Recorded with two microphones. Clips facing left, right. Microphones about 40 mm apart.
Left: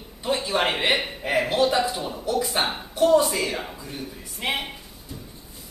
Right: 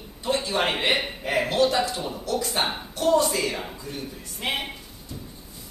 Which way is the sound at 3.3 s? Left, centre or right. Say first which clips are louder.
Even; centre.